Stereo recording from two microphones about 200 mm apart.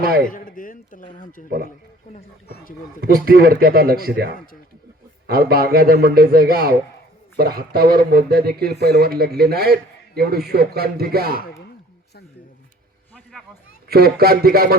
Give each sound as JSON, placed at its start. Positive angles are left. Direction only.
{"t": 0.0, "sound": "a man's voice", "side_deg": -50}
{"t": 0.3, "sound": "speech", "side_deg": 40}
{"t": 3.0, "sound": "speech", "side_deg": -50}
{"t": 13.8, "sound": "speech", "side_deg": -50}